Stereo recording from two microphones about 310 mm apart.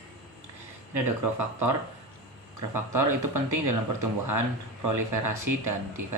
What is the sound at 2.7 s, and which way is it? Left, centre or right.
Speech, right.